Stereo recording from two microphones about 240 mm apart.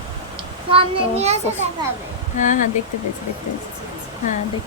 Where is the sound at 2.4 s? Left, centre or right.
Left.